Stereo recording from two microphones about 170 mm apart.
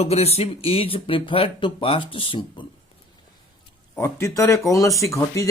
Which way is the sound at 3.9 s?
15° left (ahead or behind).